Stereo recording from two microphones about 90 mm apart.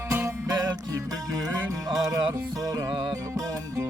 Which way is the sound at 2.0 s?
45° right (ahead or behind).